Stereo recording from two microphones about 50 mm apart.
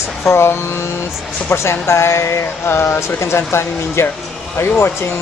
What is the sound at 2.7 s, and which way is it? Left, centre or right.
Speech, left.